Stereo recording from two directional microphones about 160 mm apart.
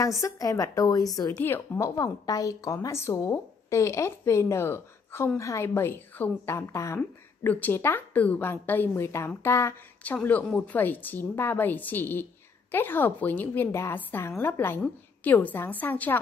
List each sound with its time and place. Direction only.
0.2 s a woman's voice: 20° left (ahead or behind)